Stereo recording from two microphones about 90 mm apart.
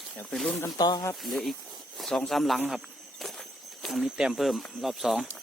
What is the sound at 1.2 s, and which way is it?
Speech, centre (ahead or behind).